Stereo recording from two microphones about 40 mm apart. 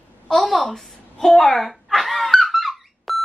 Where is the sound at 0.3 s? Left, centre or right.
Centre.